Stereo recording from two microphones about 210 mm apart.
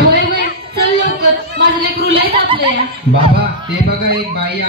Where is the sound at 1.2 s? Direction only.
45° right (ahead or behind).